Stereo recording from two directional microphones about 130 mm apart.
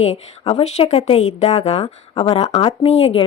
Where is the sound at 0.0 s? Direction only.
55° left (ahead or behind).